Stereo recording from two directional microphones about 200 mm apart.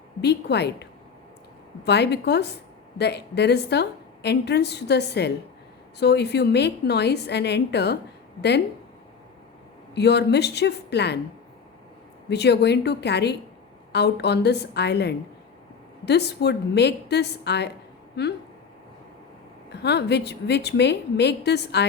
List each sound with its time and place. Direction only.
0.2 s a woman's voice: 55° left (ahead or behind)
9.9 s a woman's voice: 55° left (ahead or behind)
12.3 s a woman's voice: 55° left (ahead or behind)
19.7 s a woman's voice: 55° left (ahead or behind)